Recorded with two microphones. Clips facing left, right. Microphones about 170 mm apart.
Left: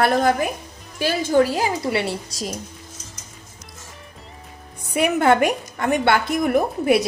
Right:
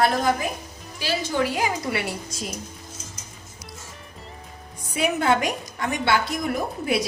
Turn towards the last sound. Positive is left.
turn(degrees=55)  # may be behind; listen again after turning